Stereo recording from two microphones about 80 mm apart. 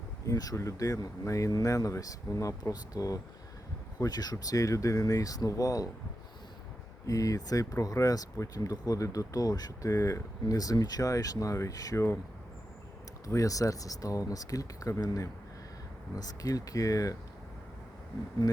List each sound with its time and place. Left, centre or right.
0.3 s speech: left
7.1 s speech: left
9.9 s speech: left
13.2 s speech: left